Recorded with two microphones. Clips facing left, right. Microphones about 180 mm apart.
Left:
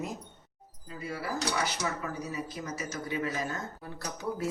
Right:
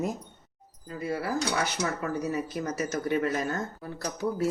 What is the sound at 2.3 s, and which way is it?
Speech, 60° right (ahead or behind).